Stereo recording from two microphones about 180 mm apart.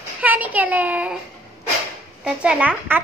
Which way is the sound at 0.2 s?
10° right (ahead or behind).